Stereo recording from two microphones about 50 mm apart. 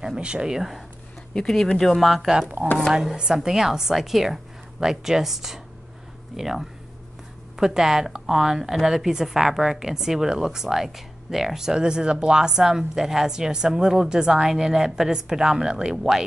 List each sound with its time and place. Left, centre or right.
0.0 s speech: centre
0.6 s speech: centre
1.3 s speech: centre
2.0 s speech: centre
2.2 s speech: centre